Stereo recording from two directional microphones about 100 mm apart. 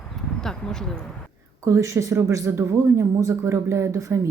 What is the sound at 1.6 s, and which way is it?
A woman's voice, 30° right (ahead or behind).